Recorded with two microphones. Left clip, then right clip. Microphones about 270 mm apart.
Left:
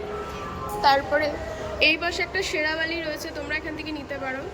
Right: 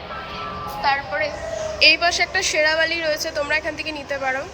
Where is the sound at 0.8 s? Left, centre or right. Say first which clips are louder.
Left 1 dB; centre.